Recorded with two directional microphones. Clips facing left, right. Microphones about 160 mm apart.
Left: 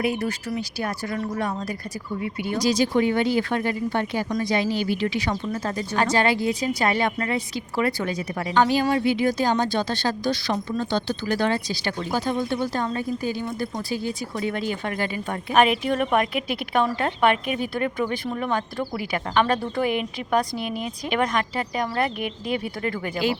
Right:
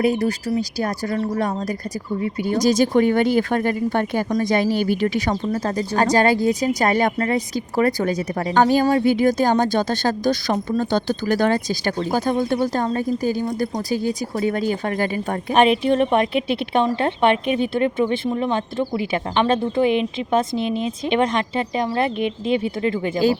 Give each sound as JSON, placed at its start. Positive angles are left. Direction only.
{"t": 0.0, "sound": "speech", "side_deg": -35}
{"t": 15.5, "sound": "speech", "side_deg": -30}